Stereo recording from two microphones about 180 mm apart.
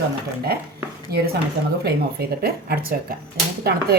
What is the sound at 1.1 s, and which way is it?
Speech, 60° right (ahead or behind).